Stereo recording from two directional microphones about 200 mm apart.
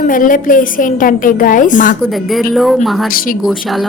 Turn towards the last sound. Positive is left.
turn(degrees=0)  # may be behind; listen again after turning